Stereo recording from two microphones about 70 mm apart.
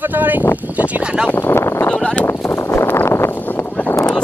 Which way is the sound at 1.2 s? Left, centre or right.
Left.